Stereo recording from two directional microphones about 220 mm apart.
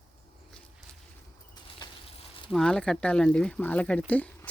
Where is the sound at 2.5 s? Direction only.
Centre (ahead or behind).